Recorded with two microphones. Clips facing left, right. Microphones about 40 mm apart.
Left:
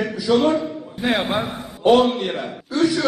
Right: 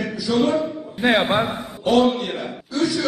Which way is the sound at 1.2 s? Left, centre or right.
Centre.